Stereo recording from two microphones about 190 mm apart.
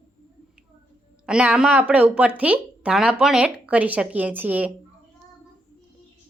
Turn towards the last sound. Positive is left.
turn(degrees=-10)  # may be behind; listen again after turning